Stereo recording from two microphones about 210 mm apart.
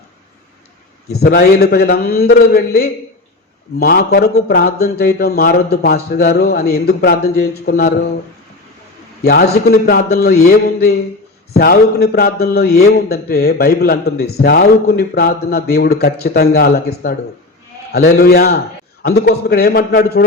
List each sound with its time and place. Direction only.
1.2 s a man's voice: 50° left (ahead or behind)
9.2 s a man's voice: 50° left (ahead or behind)